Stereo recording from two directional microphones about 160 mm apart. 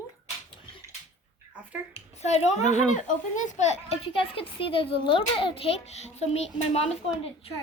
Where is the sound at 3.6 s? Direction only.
40° left (ahead or behind).